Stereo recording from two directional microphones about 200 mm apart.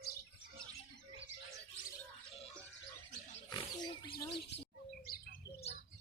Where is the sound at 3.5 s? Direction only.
20° left (ahead or behind).